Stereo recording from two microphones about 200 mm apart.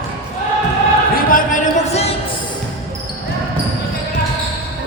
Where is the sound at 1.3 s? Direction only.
35° left (ahead or behind).